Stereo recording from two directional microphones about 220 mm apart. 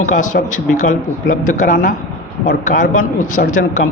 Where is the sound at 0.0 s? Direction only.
35° left (ahead or behind).